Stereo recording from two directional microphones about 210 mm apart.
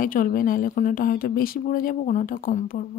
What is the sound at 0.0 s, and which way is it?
A woman's voice, 40° left (ahead or behind).